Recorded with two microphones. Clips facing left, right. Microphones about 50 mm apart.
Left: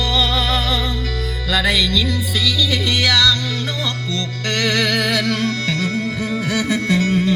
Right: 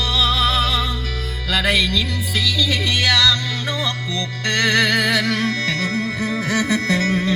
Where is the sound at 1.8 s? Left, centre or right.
Right.